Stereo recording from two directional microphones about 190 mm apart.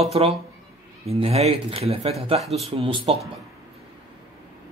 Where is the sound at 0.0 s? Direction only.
30° right (ahead or behind).